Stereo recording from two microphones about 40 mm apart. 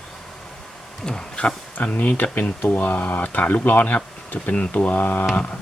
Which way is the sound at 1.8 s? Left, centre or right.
Left.